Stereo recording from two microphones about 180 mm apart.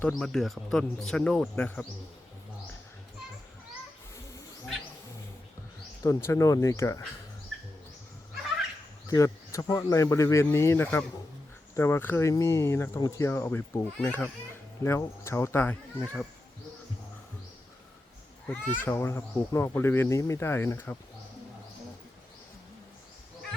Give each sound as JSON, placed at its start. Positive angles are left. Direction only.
{"t": 0.0, "sound": "speech", "side_deg": 5}
{"t": 6.0, "sound": "speech", "side_deg": 15}
{"t": 9.0, "sound": "speech", "side_deg": 15}
{"t": 18.4, "sound": "speech", "side_deg": 10}